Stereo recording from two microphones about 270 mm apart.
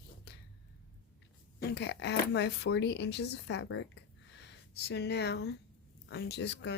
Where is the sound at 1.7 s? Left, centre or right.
Left.